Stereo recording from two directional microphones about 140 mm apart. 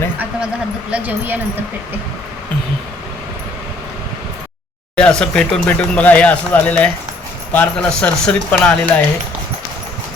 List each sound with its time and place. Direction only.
0.9 s speech: 10° right (ahead or behind)
4.9 s speech: 5° left (ahead or behind)